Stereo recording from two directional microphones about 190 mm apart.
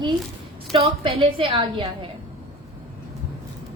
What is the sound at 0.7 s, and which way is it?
A woman's voice, 30° right (ahead or behind).